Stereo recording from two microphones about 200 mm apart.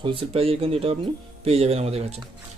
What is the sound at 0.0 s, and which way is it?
Speech, 25° right (ahead or behind).